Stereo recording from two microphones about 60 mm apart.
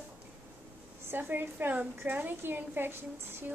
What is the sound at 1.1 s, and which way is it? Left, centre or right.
A woman's voice, right.